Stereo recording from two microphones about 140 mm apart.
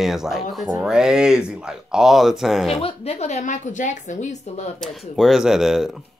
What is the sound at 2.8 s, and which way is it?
A woman's voice, 45° left (ahead or behind).